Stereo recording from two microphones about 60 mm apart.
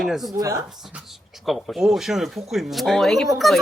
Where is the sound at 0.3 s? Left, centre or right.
Right.